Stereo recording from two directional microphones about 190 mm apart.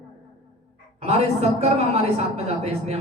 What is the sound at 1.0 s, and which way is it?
A woman's voice, 35° right (ahead or behind).